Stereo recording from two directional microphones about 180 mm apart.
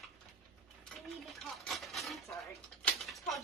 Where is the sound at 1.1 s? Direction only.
Centre (ahead or behind).